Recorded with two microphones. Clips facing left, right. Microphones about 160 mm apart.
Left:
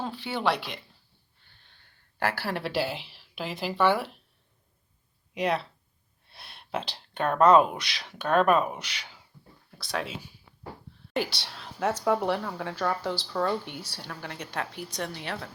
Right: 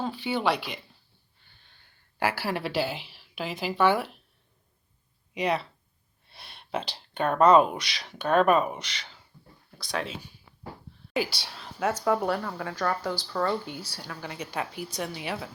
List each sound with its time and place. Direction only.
0.0 s speech: centre (ahead or behind)
5.3 s speech: centre (ahead or behind)